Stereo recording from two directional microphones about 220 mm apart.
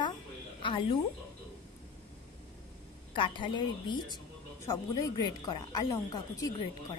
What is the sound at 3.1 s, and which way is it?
A woman's voice, 20° left (ahead or behind).